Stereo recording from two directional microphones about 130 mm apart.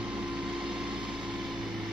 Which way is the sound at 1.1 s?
5° right (ahead or behind).